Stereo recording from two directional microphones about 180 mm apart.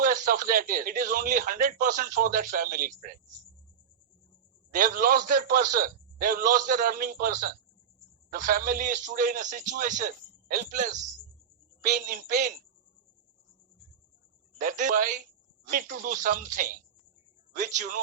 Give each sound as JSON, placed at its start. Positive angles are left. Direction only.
{"t": 0.0, "sound": "a man's voice", "side_deg": -50}
{"t": 4.7, "sound": "a man's voice", "side_deg": -50}
{"t": 14.6, "sound": "a man's voice", "side_deg": -45}